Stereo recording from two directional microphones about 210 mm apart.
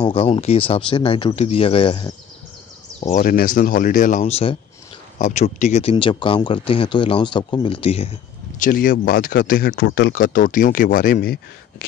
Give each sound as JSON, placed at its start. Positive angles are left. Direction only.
{"t": 0.0, "sound": "speech", "side_deg": 25}
{"t": 3.0, "sound": "speech", "side_deg": 35}
{"t": 8.5, "sound": "speech", "side_deg": 40}